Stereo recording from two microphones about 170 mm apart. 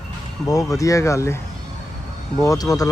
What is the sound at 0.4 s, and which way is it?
Speech, 20° left (ahead or behind).